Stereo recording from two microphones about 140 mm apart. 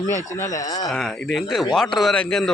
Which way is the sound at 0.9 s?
Centre (ahead or behind).